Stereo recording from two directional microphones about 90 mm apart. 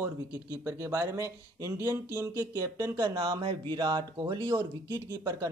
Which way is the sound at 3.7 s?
60° right (ahead or behind).